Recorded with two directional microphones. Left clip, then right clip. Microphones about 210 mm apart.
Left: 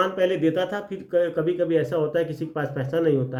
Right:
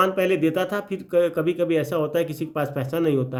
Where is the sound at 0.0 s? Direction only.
40° right (ahead or behind).